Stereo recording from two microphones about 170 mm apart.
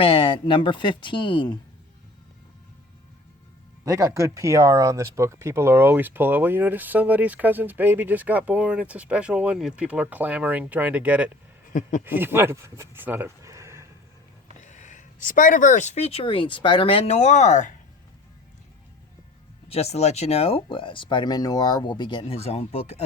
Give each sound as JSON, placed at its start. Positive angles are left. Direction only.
{"t": 0.0, "sound": "speech", "side_deg": 30}
{"t": 3.8, "sound": "speech", "side_deg": -20}
{"t": 11.7, "sound": "speech", "side_deg": 50}
{"t": 12.0, "sound": "speech", "side_deg": -10}
{"t": 14.6, "sound": "speech", "side_deg": 45}
{"t": 19.6, "sound": "speech", "side_deg": 35}